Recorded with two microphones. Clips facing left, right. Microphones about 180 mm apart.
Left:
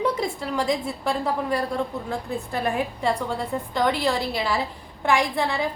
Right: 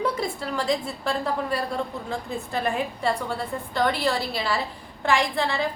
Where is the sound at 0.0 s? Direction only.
15° left (ahead or behind).